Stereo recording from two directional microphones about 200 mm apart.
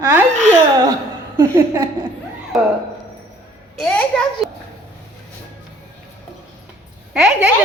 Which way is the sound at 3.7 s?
Centre (ahead or behind).